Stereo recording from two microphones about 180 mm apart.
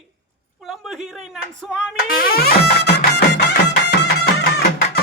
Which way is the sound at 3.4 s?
65° left (ahead or behind).